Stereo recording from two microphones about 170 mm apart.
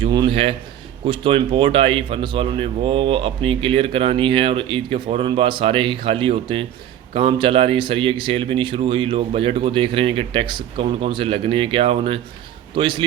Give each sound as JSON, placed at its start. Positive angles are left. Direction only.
{"t": 0.0, "sound": "speech", "side_deg": -30}